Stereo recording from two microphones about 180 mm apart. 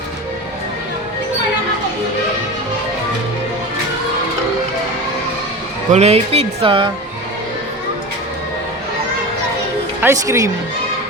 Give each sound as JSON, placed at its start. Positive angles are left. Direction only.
{"t": 5.9, "sound": "speech", "side_deg": -35}
{"t": 10.0, "sound": "speech", "side_deg": -15}